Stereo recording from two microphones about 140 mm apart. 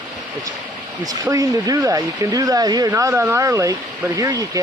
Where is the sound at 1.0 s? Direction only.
25° right (ahead or behind).